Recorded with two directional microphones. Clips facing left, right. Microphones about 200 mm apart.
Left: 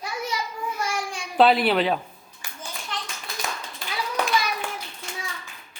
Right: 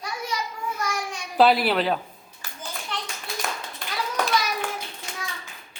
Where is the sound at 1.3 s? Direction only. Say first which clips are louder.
Left 1 dB; centre (ahead or behind).